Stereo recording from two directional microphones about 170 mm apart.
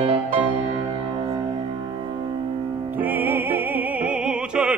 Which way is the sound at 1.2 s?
25° right (ahead or behind).